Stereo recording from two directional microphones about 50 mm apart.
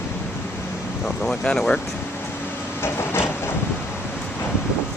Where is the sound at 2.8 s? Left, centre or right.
Left.